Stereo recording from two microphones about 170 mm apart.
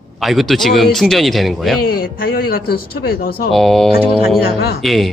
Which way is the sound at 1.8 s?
60° left (ahead or behind).